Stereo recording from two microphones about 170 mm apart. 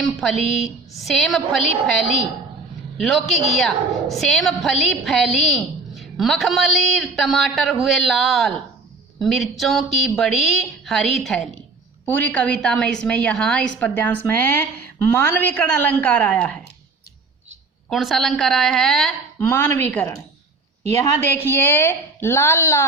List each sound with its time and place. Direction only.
0.0 s a woman's voice: centre (ahead or behind)
17.8 s a woman's voice: centre (ahead or behind)